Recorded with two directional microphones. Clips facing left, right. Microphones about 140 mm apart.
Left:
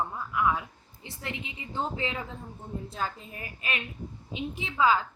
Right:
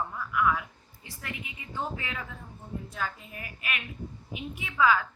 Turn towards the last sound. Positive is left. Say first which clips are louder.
# even
turn(degrees=25)  # may be behind; listen again after turning